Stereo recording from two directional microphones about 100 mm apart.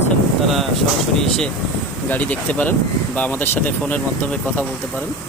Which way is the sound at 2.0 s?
15° left (ahead or behind).